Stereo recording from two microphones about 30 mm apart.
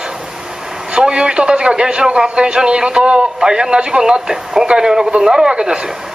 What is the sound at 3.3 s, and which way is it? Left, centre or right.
Speech, right.